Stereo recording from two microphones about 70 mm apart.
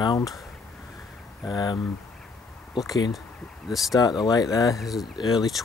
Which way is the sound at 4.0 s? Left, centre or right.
Left.